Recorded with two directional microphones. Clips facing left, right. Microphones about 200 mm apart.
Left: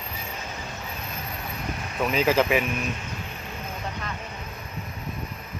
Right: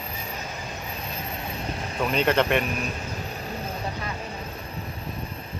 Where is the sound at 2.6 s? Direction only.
35° right (ahead or behind).